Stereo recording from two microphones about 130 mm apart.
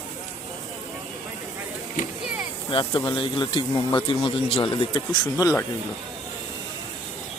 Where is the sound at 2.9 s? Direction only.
35° left (ahead or behind).